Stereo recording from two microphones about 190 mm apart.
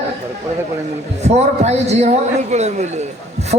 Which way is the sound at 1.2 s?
35° right (ahead or behind).